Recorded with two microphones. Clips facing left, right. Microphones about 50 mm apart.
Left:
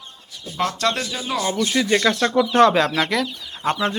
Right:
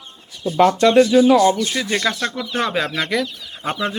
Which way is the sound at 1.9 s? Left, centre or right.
Centre.